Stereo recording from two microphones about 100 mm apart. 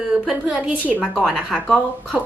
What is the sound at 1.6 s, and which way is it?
Speech, 5° left (ahead or behind).